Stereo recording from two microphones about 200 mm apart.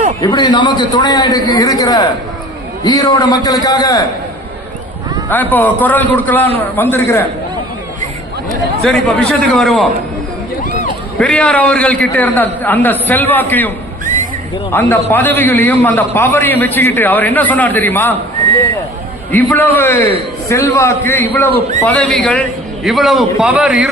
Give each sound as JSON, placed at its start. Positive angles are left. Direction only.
{"t": 0.2, "sound": "a man's voice", "side_deg": 20}
{"t": 5.3, "sound": "a man's voice", "side_deg": 10}
{"t": 8.4, "sound": "speech", "side_deg": 0}
{"t": 11.2, "sound": "a man's voice", "side_deg": 5}
{"t": 19.3, "sound": "a man's voice", "side_deg": 10}